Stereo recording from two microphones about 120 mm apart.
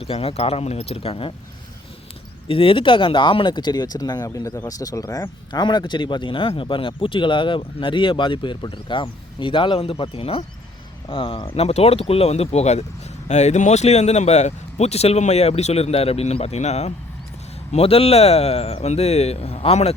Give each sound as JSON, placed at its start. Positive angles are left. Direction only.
{"t": 0.0, "sound": "speech", "side_deg": 55}
{"t": 2.5, "sound": "speech", "side_deg": 50}
{"t": 17.7, "sound": "speech", "side_deg": 55}